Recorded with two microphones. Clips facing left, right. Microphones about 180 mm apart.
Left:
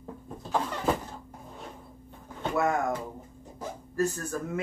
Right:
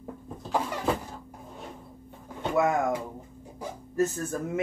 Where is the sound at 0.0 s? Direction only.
10° right (ahead or behind).